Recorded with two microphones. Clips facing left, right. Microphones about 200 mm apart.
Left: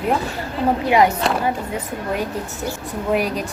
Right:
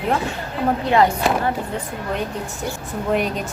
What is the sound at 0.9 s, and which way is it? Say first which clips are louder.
Speech: left 1 dB; 10° left (ahead or behind).